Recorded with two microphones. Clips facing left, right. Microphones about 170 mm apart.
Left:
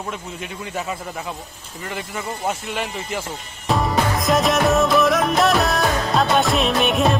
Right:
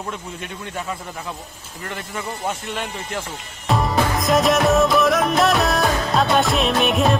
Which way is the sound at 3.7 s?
Centre (ahead or behind).